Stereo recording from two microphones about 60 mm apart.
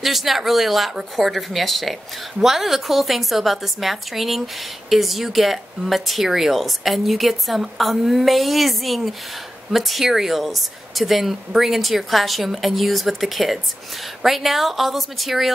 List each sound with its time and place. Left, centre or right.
0.0 s speech: centre